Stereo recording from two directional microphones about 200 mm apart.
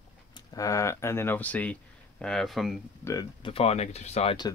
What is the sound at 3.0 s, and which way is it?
Speech, 20° left (ahead or behind).